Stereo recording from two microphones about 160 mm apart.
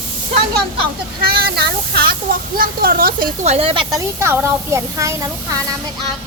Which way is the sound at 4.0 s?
15° right (ahead or behind).